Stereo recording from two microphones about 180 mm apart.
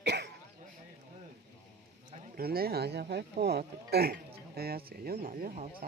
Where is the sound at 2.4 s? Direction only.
60° right (ahead or behind).